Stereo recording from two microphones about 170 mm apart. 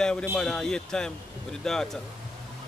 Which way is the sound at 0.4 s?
5° left (ahead or behind).